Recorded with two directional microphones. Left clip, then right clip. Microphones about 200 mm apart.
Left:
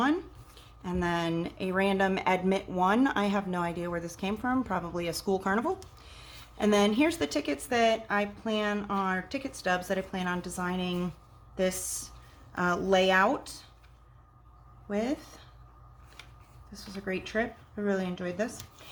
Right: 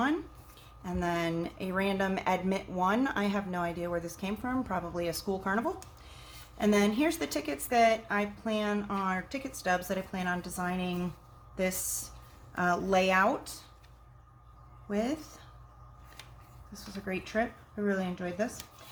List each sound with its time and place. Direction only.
0.8 s speech: 30° left (ahead or behind)
14.8 s speech: 20° left (ahead or behind)
16.7 s speech: 25° left (ahead or behind)